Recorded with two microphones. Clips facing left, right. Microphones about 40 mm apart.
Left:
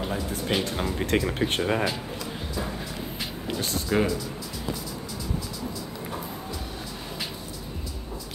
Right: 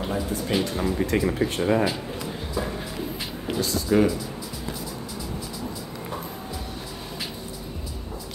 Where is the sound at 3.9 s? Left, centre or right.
Centre.